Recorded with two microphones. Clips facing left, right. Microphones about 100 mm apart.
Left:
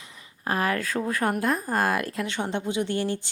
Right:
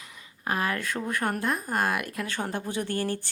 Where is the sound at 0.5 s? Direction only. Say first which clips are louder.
Left 3 dB; 35° left (ahead or behind).